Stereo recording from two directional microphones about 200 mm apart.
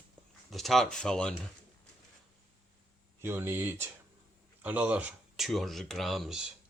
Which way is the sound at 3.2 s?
10° right (ahead or behind).